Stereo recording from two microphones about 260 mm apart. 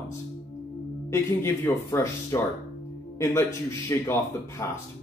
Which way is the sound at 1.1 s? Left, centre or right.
Centre.